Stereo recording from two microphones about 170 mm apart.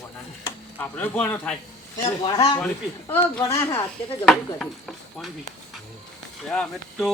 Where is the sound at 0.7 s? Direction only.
10° left (ahead or behind).